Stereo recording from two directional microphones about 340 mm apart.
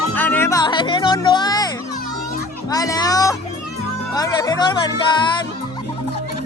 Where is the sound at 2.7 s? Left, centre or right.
Centre.